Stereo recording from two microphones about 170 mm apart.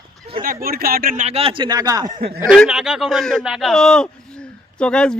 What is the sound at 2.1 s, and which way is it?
Speech, 65° right (ahead or behind).